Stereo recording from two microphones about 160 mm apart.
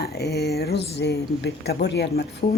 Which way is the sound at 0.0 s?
90° left.